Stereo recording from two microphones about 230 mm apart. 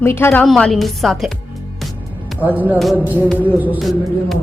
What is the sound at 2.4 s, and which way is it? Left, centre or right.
Music, centre.